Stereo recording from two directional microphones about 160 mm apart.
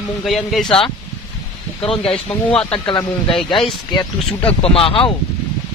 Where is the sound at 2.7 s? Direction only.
30° left (ahead or behind).